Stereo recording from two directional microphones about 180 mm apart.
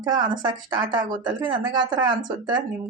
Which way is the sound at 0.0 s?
25° right (ahead or behind).